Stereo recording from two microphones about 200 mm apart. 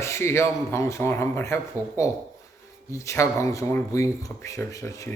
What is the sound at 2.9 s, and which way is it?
Speech, 15° left (ahead or behind).